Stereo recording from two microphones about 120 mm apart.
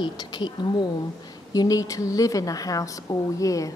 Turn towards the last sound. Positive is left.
turn(degrees=30)  # may be behind; listen again after turning